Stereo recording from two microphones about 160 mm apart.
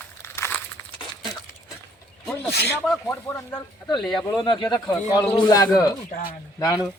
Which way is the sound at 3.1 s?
15° left (ahead or behind).